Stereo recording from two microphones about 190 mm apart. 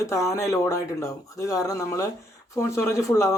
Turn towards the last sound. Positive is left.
turn(degrees=15)  # may be behind; listen again after turning